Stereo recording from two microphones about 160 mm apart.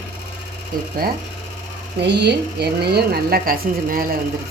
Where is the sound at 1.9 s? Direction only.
90° right.